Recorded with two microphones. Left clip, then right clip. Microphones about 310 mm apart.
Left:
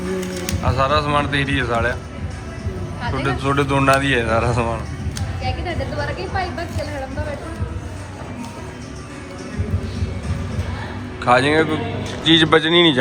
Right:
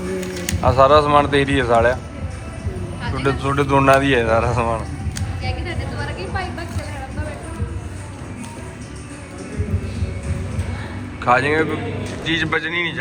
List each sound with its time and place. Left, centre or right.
0.6 s speech: centre
3.2 s speech: centre
5.4 s a sound: left
11.2 s speech: centre